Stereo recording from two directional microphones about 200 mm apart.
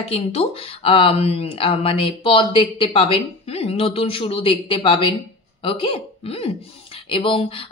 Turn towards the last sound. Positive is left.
turn(degrees=25)  # may be behind; listen again after turning